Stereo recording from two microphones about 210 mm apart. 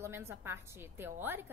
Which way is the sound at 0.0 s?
10° right (ahead or behind).